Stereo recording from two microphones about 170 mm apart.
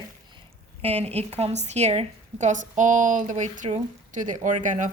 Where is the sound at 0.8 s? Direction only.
35° right (ahead or behind).